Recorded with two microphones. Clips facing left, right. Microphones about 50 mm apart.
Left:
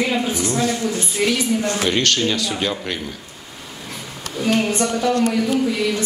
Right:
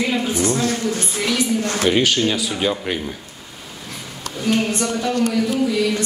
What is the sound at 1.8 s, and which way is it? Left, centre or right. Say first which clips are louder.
Speech: right 4 dB; centre.